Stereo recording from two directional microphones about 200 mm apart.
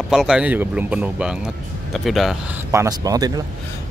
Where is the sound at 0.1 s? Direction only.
Centre (ahead or behind).